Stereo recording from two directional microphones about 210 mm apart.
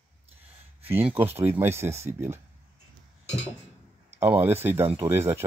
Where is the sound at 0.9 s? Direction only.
10° right (ahead or behind).